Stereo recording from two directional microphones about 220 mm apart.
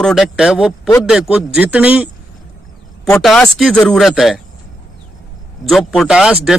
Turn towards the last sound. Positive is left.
turn(degrees=-5)  # may be behind; listen again after turning